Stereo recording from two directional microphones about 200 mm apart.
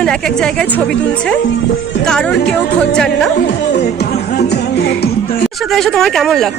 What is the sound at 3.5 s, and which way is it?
Music, 55° left (ahead or behind).